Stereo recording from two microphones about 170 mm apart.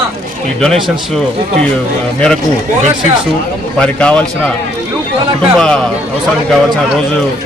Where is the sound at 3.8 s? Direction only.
5° left (ahead or behind).